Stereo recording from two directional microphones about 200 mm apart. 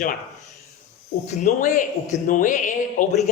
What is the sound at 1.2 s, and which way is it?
A man's voice, 40° left (ahead or behind).